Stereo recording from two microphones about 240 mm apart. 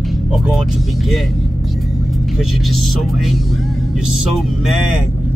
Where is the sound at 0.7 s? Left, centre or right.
Centre.